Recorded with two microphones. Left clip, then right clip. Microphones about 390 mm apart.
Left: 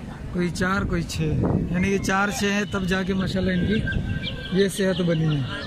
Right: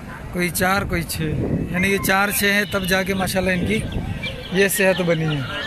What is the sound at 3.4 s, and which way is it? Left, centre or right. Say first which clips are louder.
Speech: right 5 dB; right.